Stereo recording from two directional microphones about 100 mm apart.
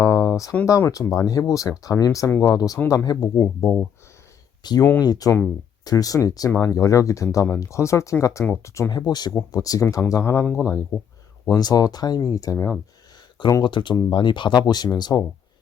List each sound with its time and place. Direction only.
0.0 s a sound: 35° left (ahead or behind)
0.6 s speech: 35° left (ahead or behind)
3.3 s speech: 25° left (ahead or behind)
4.6 s speech: 40° left (ahead or behind)
8.9 s speech: 45° left (ahead or behind)
10.6 s speech: 15° right (ahead or behind)
11.4 s speech: 40° left (ahead or behind)
13.6 s speech: 50° left (ahead or behind)